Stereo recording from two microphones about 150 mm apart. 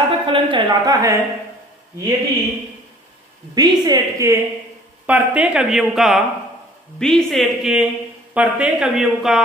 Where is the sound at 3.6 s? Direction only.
25° right (ahead or behind).